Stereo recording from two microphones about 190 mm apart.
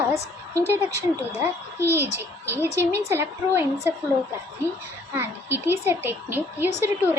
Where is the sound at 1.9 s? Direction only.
15° right (ahead or behind).